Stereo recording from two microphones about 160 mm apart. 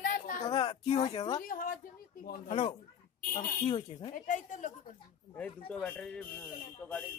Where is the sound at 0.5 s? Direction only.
30° left (ahead or behind).